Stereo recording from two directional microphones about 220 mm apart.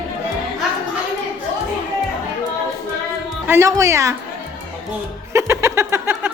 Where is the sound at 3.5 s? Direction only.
15° right (ahead or behind).